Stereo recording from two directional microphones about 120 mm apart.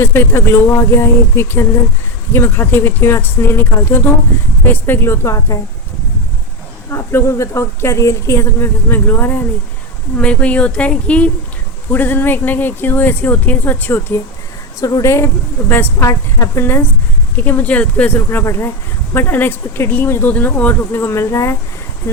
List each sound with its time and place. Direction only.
0.0 s a woman's voice: 20° left (ahead or behind)
6.9 s a woman's voice: 20° left (ahead or behind)